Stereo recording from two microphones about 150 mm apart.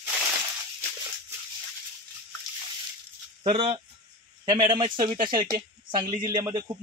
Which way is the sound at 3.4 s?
35° right (ahead or behind).